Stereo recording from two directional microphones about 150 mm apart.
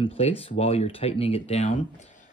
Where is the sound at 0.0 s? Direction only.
40° left (ahead or behind).